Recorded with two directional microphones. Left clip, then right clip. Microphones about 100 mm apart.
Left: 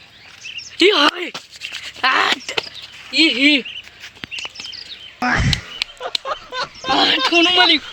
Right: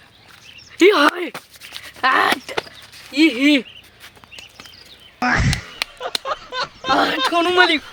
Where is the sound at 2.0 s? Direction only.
15° right (ahead or behind).